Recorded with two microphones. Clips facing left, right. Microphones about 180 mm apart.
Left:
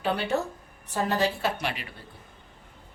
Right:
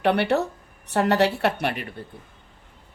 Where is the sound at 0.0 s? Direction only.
70° right (ahead or behind); by 1.9 s 55° right (ahead or behind).